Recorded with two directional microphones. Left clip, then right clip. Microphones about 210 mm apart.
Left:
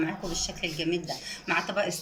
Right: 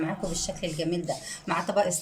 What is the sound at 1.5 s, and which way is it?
Speech, 30° right (ahead or behind).